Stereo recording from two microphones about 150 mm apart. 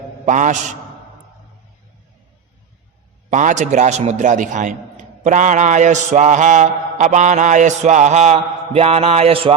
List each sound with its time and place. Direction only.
0.3 s a man's voice: 55° right (ahead or behind)
3.2 s mantra: 55° right (ahead or behind)